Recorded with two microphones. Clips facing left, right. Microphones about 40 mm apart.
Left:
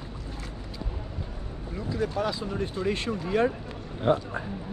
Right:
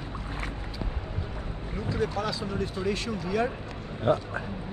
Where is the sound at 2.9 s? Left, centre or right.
Left.